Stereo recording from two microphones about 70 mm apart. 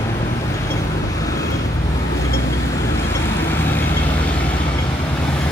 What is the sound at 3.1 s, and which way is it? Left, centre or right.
Vehicle, left.